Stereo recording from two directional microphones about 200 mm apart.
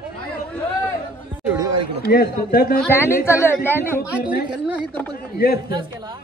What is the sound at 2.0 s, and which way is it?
Speech, 50° left (ahead or behind).